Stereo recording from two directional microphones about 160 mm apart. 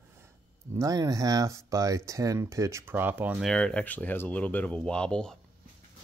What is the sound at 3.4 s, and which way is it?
Speech, 5° left (ahead or behind).